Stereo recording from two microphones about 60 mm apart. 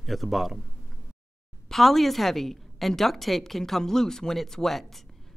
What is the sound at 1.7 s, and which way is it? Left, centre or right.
A woman's voice, centre.